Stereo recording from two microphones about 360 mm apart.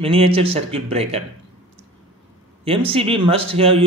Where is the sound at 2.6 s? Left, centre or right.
Centre.